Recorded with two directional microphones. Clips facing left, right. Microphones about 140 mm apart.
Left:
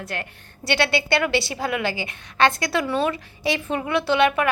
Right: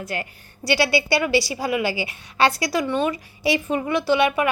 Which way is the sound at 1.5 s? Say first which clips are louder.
Right 2 dB; 5° right (ahead or behind).